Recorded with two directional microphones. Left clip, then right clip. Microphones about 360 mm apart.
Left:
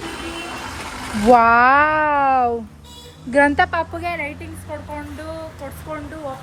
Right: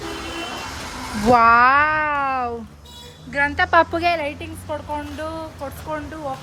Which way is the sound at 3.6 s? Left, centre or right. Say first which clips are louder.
Right 7 dB; right.